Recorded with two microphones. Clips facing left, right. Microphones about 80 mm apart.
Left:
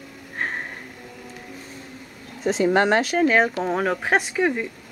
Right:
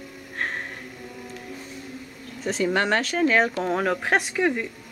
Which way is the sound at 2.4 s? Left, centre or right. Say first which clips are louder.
Left 5 dB; left.